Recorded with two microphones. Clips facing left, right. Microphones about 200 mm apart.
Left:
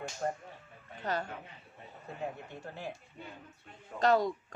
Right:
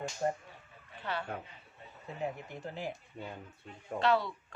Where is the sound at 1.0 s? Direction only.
40° left (ahead or behind).